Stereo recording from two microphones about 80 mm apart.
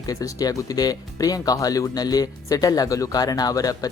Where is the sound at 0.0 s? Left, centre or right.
Left.